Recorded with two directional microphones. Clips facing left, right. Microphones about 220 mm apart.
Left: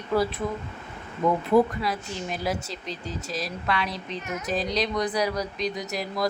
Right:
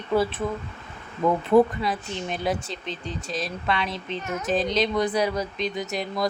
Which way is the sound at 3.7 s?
25° right (ahead or behind).